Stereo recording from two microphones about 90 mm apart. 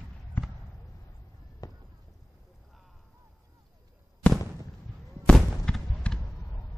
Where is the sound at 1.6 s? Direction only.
40° left (ahead or behind).